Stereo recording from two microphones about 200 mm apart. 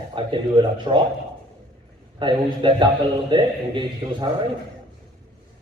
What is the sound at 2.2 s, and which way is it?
Speech, 25° right (ahead or behind).